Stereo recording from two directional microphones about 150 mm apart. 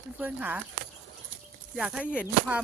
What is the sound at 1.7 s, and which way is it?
Speech, 5° right (ahead or behind).